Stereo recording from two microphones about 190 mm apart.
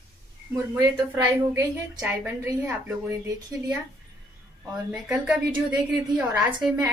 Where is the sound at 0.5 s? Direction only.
15° right (ahead or behind).